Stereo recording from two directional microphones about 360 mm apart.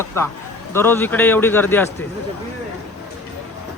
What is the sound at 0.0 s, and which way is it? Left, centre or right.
Speech, centre.